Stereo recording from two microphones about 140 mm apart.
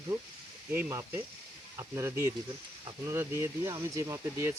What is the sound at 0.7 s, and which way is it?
Speech, 15° right (ahead or behind).